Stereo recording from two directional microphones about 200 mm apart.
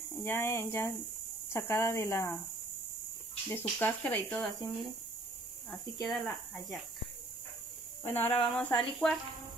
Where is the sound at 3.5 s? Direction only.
10° left (ahead or behind).